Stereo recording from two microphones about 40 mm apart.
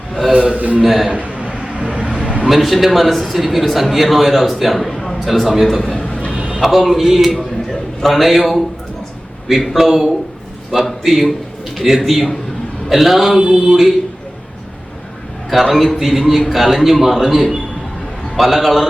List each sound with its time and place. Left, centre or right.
0.5 s a man's voice: right
0.8 s a man's voice: centre
1.4 s vehicle: right
2.2 s a sound: right
2.5 s a man's voice: centre
6.6 s a man's voice: centre
13.4 s a sound: right
15.4 s a man's voice: centre